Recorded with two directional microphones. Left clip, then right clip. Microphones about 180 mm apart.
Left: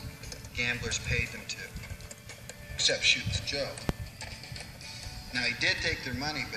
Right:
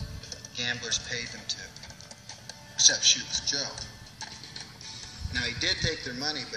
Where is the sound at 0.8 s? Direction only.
50° left (ahead or behind).